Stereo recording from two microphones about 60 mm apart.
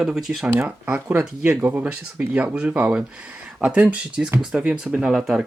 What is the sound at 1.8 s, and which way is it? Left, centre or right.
Speech, right.